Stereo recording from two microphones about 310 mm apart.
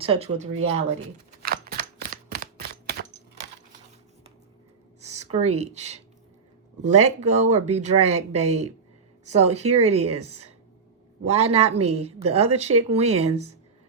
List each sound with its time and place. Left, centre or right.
0.0 s speech: centre
1.5 s typewriter: right
4.9 s speech: right